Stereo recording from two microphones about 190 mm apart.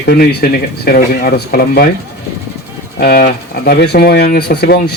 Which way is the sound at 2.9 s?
55° left (ahead or behind).